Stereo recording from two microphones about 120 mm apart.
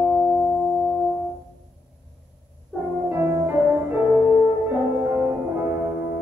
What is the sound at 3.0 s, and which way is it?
Music, 20° right (ahead or behind).